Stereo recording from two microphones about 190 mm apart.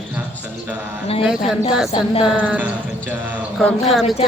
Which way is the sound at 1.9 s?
30° left (ahead or behind).